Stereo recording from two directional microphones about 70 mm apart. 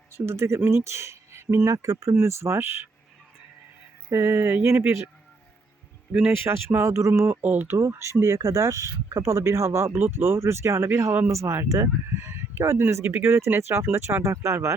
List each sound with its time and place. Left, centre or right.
0.1 s speech: right
4.1 s speech: right
6.4 s speech: right
7.4 s speech: right
7.8 s speech: right